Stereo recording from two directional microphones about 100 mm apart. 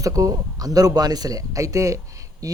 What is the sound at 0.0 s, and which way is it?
Speech, 35° right (ahead or behind).